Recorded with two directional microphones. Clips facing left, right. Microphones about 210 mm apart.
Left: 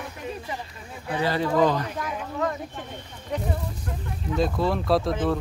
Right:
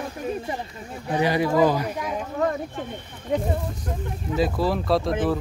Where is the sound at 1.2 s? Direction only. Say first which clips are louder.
Right 2 dB; 15° right (ahead or behind).